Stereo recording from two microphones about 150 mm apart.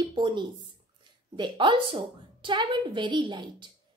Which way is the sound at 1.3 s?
35° right (ahead or behind).